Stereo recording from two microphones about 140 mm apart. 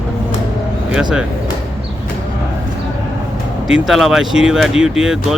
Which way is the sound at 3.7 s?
Centre (ahead or behind).